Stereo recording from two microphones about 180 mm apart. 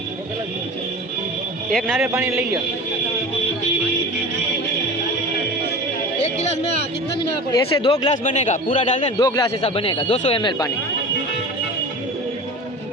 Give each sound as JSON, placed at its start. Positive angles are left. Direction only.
{"t": 1.7, "sound": "a man's voice", "side_deg": 0}
{"t": 6.2, "sound": "speech", "side_deg": 35}
{"t": 8.1, "sound": "speech", "side_deg": 40}
{"t": 9.1, "sound": "speech", "side_deg": 20}